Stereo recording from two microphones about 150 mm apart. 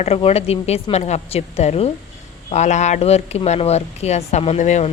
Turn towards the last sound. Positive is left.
turn(degrees=50)  # may be behind; listen again after turning